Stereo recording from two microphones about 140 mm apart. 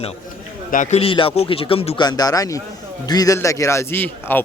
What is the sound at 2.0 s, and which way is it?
Speech, 30° left (ahead or behind).